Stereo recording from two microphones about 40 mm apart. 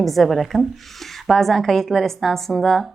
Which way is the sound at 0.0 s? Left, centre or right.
Centre.